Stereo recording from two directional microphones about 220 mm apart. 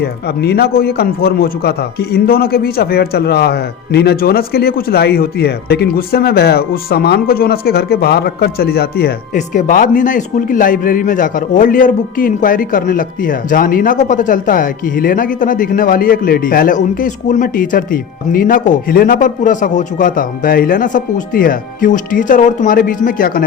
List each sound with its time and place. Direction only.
0.0 s a man's voice: 45° left (ahead or behind)